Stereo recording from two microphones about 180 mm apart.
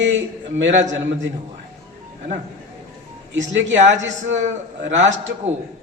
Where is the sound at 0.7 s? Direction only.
40° right (ahead or behind).